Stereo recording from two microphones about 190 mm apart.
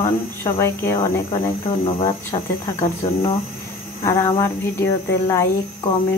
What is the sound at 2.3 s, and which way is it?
Speech, 30° left (ahead or behind).